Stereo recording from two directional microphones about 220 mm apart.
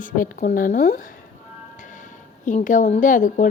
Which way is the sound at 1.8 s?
35° left (ahead or behind).